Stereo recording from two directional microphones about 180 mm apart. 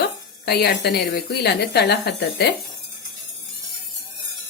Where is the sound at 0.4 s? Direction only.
65° left (ahead or behind).